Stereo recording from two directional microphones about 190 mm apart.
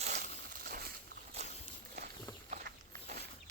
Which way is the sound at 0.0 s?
45° right (ahead or behind).